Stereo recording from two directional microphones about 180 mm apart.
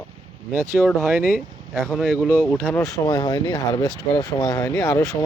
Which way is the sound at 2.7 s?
15° left (ahead or behind).